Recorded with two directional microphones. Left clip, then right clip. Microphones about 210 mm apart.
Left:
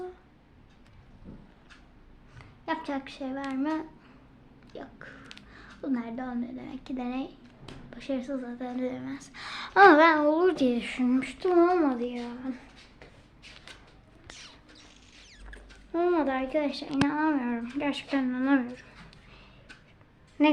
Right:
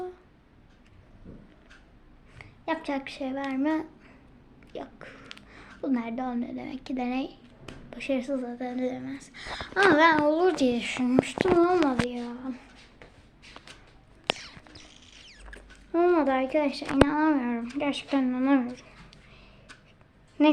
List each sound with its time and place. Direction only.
2.4 s speech: 5° right (ahead or behind); by 10.1 s 20° left (ahead or behind)
10.1 s speech: 10° left (ahead or behind)
14.3 s rodents: 15° right (ahead or behind)
17.7 s a woman's voice: 10° right (ahead or behind)
20.4 s a woman's voice: 10° right (ahead or behind)